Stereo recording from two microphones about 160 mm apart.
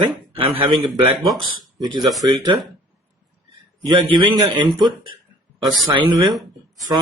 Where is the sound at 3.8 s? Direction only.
30° right (ahead or behind).